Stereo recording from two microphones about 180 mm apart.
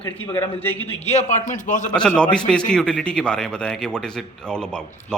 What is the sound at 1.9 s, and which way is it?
A man's voice, 5° left (ahead or behind).